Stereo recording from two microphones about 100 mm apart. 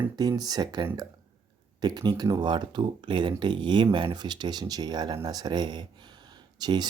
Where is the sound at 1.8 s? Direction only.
45° right (ahead or behind).